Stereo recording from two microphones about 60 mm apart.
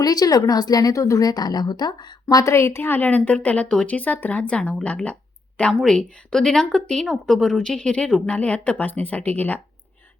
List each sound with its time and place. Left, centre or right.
0.0 s a woman's voice: left
2.3 s a woman's voice: left